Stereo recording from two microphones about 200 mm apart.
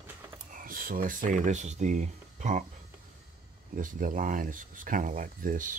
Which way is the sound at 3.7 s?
45° right (ahead or behind).